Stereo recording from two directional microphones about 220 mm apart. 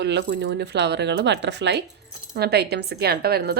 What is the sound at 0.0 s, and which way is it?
Speech, 50° right (ahead or behind).